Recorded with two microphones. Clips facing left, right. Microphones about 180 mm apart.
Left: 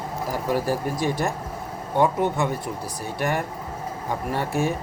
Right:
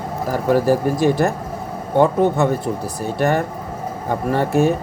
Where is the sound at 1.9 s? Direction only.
80° right.